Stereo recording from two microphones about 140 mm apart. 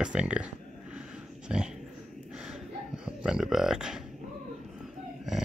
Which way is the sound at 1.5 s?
5° right (ahead or behind).